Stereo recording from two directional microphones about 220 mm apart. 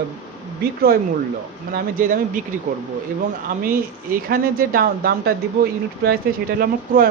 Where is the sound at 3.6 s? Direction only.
40° right (ahead or behind).